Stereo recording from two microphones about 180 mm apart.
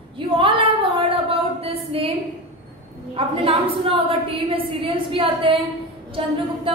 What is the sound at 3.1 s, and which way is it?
A woman's voice, 30° right (ahead or behind).